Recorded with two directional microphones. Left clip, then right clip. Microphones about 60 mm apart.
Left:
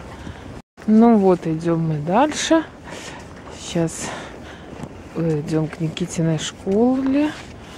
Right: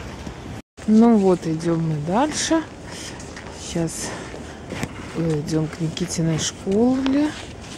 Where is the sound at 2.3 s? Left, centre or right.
Left.